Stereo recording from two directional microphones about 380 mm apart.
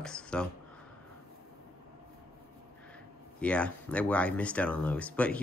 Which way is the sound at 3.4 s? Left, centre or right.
Centre.